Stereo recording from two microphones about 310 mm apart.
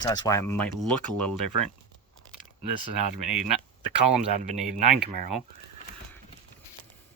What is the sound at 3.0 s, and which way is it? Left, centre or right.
Speech, right.